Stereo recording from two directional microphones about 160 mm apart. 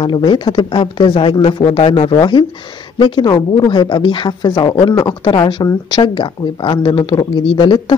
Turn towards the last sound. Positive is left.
turn(degrees=30)  # may be behind; listen again after turning